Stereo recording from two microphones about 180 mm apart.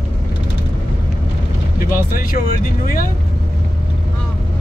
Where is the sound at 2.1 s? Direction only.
50° left (ahead or behind).